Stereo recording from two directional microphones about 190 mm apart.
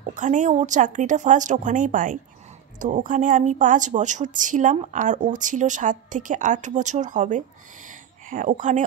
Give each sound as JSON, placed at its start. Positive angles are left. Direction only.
{"t": 0.0, "sound": "a woman's voice", "side_deg": -40}